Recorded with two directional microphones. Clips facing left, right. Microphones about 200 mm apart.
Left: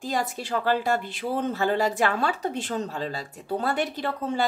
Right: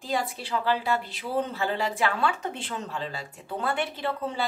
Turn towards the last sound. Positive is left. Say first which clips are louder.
# left 2 dB
turn(degrees=45)  # may be behind; listen again after turning